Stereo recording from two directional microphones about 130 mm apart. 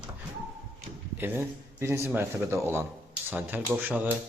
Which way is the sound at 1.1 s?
15° right (ahead or behind).